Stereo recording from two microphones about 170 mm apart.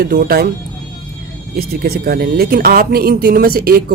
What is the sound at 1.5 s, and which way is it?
Speech, 65° right (ahead or behind).